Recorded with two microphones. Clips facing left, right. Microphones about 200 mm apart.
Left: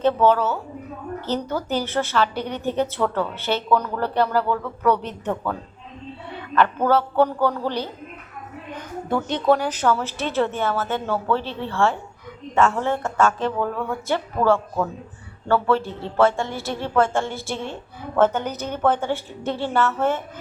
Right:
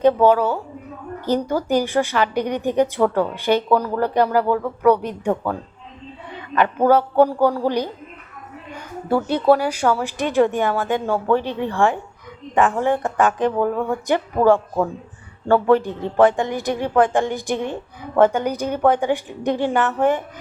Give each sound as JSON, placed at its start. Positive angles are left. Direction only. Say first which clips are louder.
{"t": 0.0, "sound": "a woman's voice", "louder": "right 3 dB", "side_deg": -10}